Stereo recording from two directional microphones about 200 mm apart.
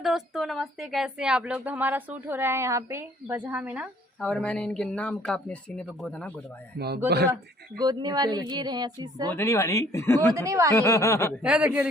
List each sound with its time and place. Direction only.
0.0 s speech: centre (ahead or behind)
4.2 s speech: 5° left (ahead or behind)
6.7 s speech: 55° right (ahead or behind)
7.8 s speech: 20° right (ahead or behind)
9.3 s speech: 15° left (ahead or behind)
10.3 s speech: 15° right (ahead or behind)
10.8 s speech: 15° left (ahead or behind)
11.4 s speech: 5° right (ahead or behind)